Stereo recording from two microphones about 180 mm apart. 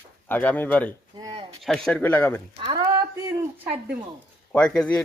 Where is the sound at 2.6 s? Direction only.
20° right (ahead or behind).